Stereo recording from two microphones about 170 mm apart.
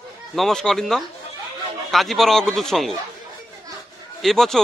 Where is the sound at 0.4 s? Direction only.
Centre (ahead or behind).